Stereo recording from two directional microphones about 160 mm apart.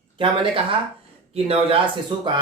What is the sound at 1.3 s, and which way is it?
Speech, 35° right (ahead or behind).